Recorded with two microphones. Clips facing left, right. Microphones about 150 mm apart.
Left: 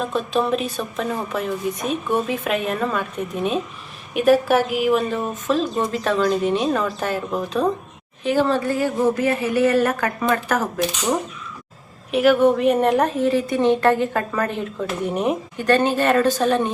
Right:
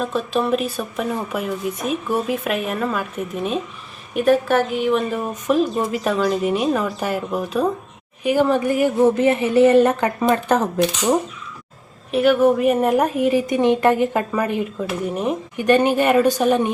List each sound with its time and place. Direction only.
0.0 s a woman's voice: centre (ahead or behind)
5.0 s a woman's voice: 10° right (ahead or behind)
12.1 s a woman's voice: centre (ahead or behind)
15.5 s a woman's voice: 15° right (ahead or behind)